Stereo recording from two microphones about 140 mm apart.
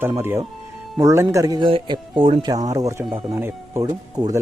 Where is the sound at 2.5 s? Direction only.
25° right (ahead or behind).